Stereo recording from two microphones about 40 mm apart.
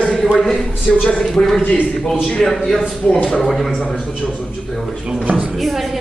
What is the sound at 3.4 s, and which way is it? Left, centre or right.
A man's voice, centre.